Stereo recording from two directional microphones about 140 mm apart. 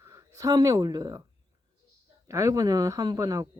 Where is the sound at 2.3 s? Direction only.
25° right (ahead or behind).